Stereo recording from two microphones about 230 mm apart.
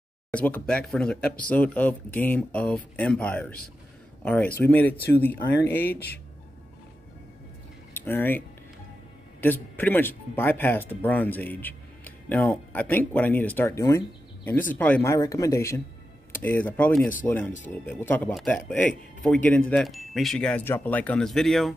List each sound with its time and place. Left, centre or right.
0.3 s speech: centre
4.9 s speech: left
5.7 s speech: centre
7.9 s speech: centre